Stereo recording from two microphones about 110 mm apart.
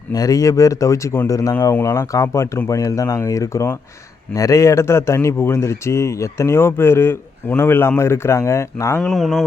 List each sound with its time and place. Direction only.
0.1 s speech: 35° left (ahead or behind)
9.0 s speech: centre (ahead or behind)